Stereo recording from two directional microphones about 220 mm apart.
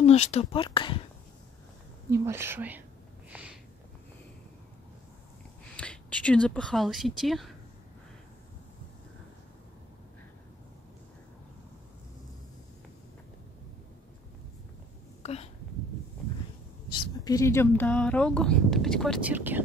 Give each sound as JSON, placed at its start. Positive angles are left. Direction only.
{"t": 0.0, "sound": "speech", "side_deg": 30}
{"t": 2.0, "sound": "speech", "side_deg": -10}
{"t": 3.3, "sound": "a sound", "side_deg": -5}
{"t": 5.8, "sound": "speech", "side_deg": 5}
{"t": 15.2, "sound": "a sound", "side_deg": 30}
{"t": 17.2, "sound": "speech", "side_deg": 15}